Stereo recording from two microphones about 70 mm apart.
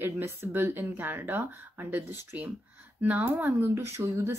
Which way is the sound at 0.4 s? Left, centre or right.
Right.